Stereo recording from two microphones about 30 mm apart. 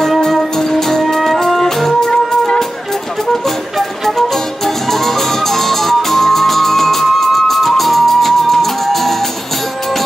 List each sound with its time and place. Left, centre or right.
0.3 s music: centre
4.9 s music: centre